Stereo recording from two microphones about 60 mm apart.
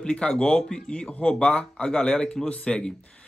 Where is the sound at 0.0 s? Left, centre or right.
Centre.